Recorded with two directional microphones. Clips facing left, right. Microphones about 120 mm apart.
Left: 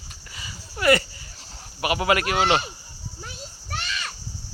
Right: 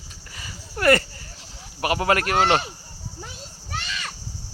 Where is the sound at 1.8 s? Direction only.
35° right (ahead or behind).